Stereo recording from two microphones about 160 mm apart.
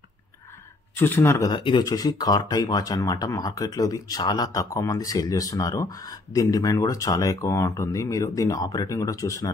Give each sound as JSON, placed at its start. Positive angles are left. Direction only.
{"t": 0.9, "sound": "speech", "side_deg": 15}
{"t": 1.5, "sound": "speech", "side_deg": 30}